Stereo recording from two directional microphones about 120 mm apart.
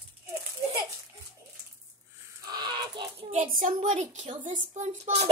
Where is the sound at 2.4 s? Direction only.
35° right (ahead or behind).